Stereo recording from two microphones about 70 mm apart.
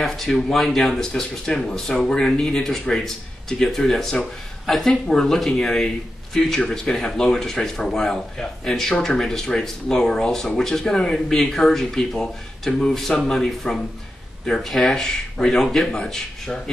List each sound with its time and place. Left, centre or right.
0.0 s speech: centre